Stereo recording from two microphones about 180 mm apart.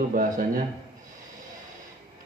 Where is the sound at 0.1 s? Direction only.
50° right (ahead or behind).